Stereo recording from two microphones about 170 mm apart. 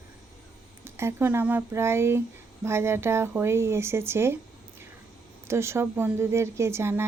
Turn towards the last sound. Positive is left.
turn(degrees=-15)  # may be behind; listen again after turning